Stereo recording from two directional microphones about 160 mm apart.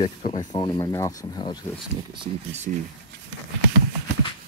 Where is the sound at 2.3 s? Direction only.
45° right (ahead or behind).